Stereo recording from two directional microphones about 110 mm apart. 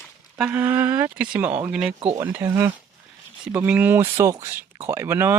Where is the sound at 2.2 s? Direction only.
20° right (ahead or behind).